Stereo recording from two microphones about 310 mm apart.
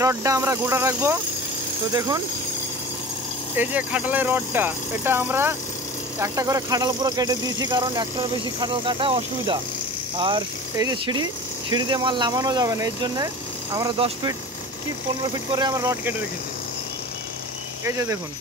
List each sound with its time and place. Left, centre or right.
0.0 s speech: centre
3.5 s speech: centre
15.3 s speech: centre
17.8 s speech: centre